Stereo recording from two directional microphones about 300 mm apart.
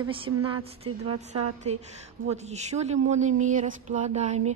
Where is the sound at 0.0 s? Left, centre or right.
Centre.